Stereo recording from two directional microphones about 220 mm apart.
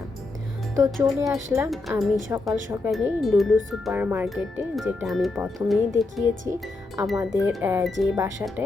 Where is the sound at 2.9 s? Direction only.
Centre (ahead or behind).